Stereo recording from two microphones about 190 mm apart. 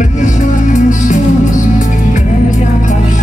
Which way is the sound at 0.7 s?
40° left (ahead or behind).